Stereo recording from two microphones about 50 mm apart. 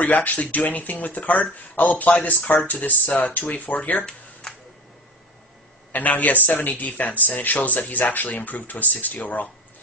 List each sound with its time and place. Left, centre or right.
0.0 s speech: left
5.9 s speech: left